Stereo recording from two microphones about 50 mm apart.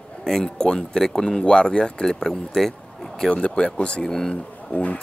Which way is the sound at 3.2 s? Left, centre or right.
Left.